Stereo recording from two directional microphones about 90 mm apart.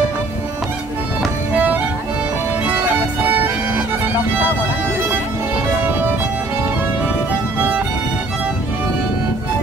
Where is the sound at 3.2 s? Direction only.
20° right (ahead or behind).